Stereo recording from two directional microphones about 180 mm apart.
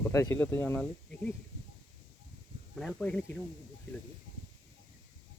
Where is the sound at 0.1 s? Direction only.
15° left (ahead or behind).